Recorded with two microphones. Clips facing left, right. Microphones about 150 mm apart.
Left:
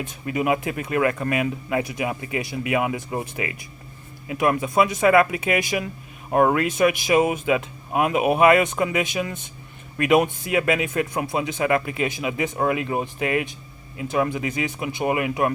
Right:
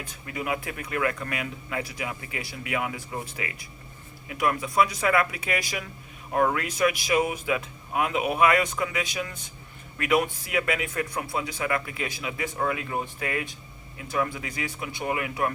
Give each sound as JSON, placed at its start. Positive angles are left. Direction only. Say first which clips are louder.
{"t": 0.0, "sound": "speech", "louder": "left 9 dB", "side_deg": 20}
{"t": 7.9, "sound": "speech", "louder": "left 5 dB", "side_deg": 50}
{"t": 8.2, "sound": "speech", "louder": "left 6 dB", "side_deg": 25}